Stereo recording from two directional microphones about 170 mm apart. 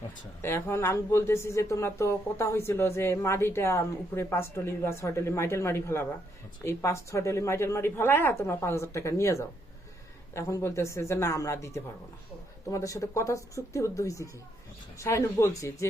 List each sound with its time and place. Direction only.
0.4 s speech: 15° left (ahead or behind)